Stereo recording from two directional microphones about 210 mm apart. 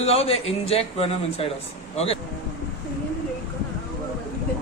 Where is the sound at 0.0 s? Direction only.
30° left (ahead or behind).